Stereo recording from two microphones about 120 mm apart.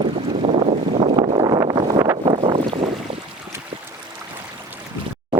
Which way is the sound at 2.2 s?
45° right (ahead or behind).